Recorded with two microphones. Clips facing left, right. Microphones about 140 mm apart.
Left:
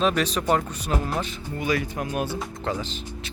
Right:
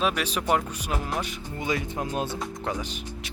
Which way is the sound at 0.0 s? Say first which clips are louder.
Left 4 dB; 10° right (ahead or behind).